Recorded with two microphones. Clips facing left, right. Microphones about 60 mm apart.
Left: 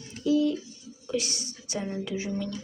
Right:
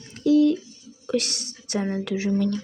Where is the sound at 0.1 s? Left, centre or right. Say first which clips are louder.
Right 6 dB; right.